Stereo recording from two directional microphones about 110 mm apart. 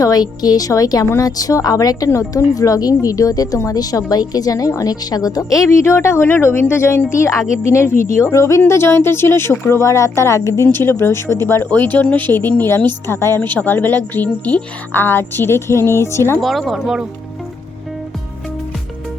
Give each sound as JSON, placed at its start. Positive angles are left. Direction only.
{"t": 0.0, "sound": "a woman's voice", "side_deg": 35}
{"t": 16.4, "sound": "speech", "side_deg": 0}